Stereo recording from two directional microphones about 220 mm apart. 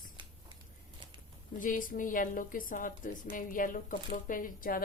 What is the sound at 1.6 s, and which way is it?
Speech, 40° left (ahead or behind).